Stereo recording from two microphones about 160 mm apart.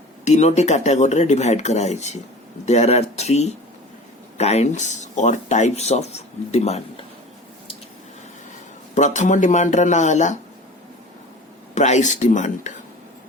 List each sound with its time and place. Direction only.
0.3 s speech: 45° left (ahead or behind)
9.0 s speech: 50° left (ahead or behind)
11.7 s speech: 45° left (ahead or behind)